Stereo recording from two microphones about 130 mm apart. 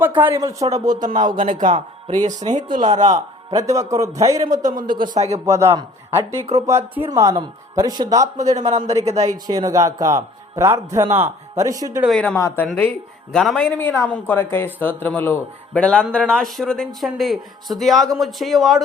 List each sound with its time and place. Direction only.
0.0 s speech: 15° right (ahead or behind)
0.3 s speech: 25° right (ahead or behind)
0.9 s a man's voice: 80° right
2.2 s speech: 30° right (ahead or behind)
2.7 s speech: 70° right (ahead or behind)
3.2 s speech: 25° right (ahead or behind)
4.6 s a man's voice: 80° right; by 5.4 s 60° right (ahead or behind)
5.5 s speech: 20° right (ahead or behind)
6.4 s a man's voice: 55° right (ahead or behind)
6.7 s speech: 20° right (ahead or behind)
12.0 s speech: 5° left (ahead or behind)
12.4 s speech: 20° left (ahead or behind)
12.6 s speech: 10° left (ahead or behind)
13.7 s speech: 15° left (ahead or behind); by 18.8 s centre (ahead or behind)